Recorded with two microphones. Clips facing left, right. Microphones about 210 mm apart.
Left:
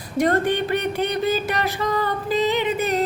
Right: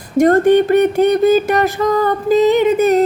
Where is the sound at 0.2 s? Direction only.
45° right (ahead or behind).